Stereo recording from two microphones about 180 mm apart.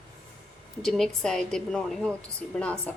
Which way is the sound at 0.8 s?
Centre (ahead or behind).